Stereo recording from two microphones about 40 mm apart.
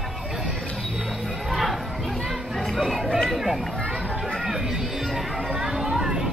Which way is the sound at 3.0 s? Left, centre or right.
Centre.